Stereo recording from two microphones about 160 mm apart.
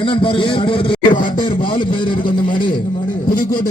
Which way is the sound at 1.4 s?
30° left (ahead or behind).